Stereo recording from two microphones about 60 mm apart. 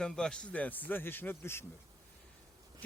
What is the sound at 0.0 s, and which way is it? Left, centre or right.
Speech, centre.